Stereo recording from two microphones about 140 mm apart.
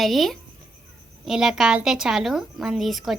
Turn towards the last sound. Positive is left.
turn(degrees=0)  # may be behind; listen again after turning